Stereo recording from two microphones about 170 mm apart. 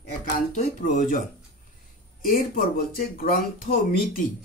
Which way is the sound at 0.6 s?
50° left (ahead or behind).